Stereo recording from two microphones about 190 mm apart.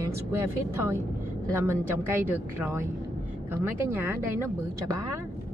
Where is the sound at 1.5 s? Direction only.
10° right (ahead or behind).